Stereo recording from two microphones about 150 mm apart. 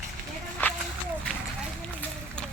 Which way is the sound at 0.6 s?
15° left (ahead or behind).